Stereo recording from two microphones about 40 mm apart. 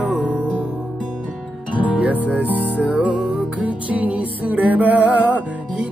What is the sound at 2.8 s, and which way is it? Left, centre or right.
Music, right.